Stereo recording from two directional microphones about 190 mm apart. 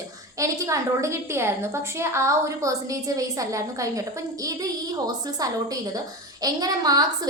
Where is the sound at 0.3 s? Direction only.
15° right (ahead or behind).